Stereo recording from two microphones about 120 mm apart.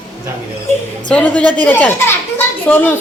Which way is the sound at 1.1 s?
10° left (ahead or behind).